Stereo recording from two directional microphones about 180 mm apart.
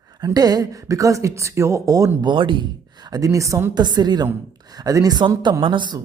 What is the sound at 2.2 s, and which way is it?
A woman's voice, 25° right (ahead or behind).